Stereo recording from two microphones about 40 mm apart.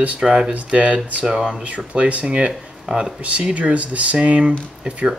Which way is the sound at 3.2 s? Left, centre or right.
Right.